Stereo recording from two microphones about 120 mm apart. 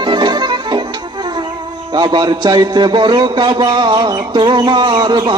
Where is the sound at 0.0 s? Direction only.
40° right (ahead or behind).